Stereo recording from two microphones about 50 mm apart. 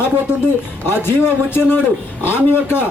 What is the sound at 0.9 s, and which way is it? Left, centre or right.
A man's voice, left.